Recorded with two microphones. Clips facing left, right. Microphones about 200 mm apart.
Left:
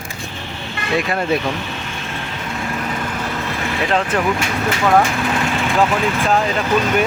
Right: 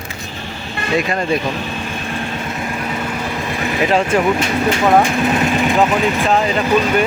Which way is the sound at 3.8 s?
10° right (ahead or behind).